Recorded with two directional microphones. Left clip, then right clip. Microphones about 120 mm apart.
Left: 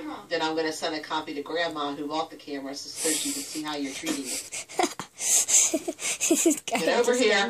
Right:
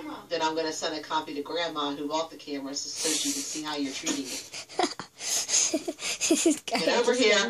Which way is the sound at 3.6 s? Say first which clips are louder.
Left 1 dB; 15° left (ahead or behind).